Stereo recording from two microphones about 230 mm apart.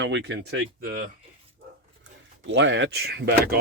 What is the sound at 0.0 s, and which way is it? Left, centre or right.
Speech, right.